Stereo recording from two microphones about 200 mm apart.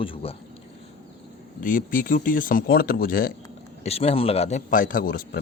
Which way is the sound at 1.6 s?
40° left (ahead or behind).